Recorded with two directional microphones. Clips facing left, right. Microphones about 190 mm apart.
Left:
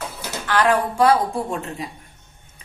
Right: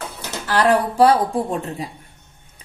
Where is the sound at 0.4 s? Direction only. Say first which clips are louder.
Right 2 dB; 35° right (ahead or behind).